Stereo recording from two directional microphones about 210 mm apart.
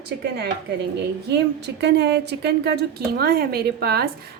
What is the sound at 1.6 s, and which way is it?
A woman's voice, 55° right (ahead or behind).